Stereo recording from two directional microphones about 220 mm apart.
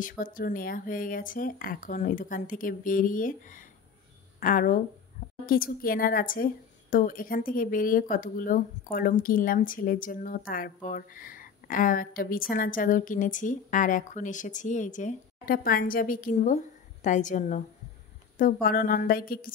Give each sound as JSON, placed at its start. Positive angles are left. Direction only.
{"t": 0.2, "sound": "a woman's voice", "side_deg": 40}